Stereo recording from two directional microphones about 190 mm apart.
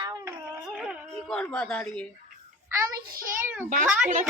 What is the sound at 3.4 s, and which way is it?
Speech, 10° right (ahead or behind).